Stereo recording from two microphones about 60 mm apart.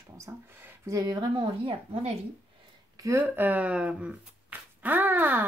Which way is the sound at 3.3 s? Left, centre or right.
Right.